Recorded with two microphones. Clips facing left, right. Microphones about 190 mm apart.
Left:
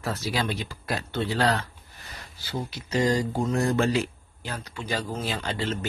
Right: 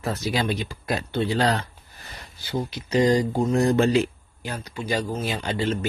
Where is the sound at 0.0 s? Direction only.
20° right (ahead or behind).